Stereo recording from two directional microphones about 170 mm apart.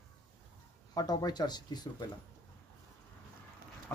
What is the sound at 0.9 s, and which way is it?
Speech, 25° left (ahead or behind).